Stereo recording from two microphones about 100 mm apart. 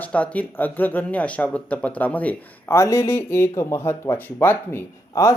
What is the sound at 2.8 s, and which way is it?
Speech, 30° left (ahead or behind).